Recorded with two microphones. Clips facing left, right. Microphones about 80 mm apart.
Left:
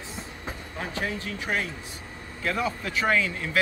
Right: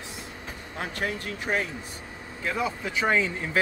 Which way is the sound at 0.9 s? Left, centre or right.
Right.